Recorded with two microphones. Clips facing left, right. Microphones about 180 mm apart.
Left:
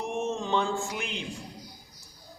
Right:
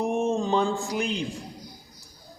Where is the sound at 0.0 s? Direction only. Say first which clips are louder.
Right 6 dB; 35° right (ahead or behind).